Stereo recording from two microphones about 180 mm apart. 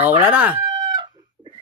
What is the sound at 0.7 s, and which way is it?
Chicken, 25° right (ahead or behind).